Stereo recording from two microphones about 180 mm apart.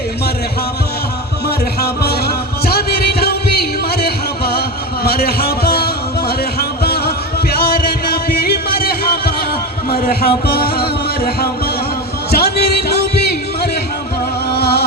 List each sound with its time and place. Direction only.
1.5 s music: 60° left (ahead or behind)
8.7 s a sound: 55° left (ahead or behind)
14.5 s music: 65° left (ahead or behind)